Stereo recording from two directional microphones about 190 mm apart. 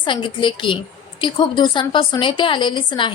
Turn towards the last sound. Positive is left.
turn(degrees=25)  # may be behind; listen again after turning